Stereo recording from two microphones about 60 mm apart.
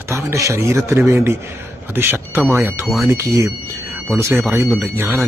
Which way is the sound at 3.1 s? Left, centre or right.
Right.